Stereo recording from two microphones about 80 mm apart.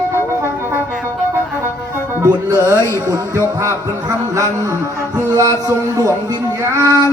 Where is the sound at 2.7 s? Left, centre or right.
Left.